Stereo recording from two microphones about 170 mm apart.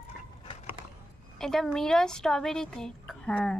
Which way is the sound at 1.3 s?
Centre (ahead or behind).